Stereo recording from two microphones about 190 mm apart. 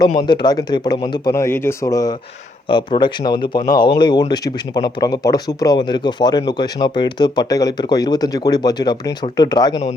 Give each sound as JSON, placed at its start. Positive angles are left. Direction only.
{"t": 0.2, "sound": "speech", "side_deg": 25}